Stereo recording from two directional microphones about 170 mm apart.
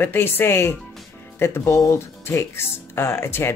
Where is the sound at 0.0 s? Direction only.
10° left (ahead or behind).